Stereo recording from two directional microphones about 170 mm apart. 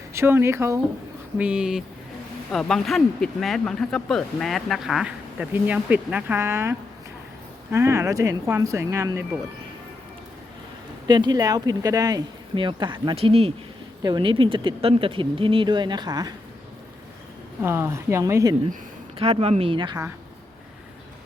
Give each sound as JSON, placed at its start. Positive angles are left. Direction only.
{"t": 0.1, "sound": "speech", "side_deg": -15}
{"t": 11.1, "sound": "speech", "side_deg": -25}
{"t": 17.6, "sound": "speech", "side_deg": -15}
{"t": 19.2, "sound": "speech", "side_deg": -35}